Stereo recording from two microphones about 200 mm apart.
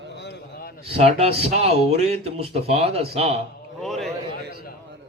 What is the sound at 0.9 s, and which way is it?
Speech, 30° right (ahead or behind).